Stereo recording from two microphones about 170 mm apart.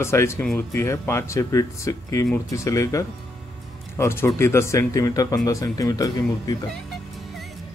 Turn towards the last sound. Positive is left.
turn(degrees=25)  # may be behind; listen again after turning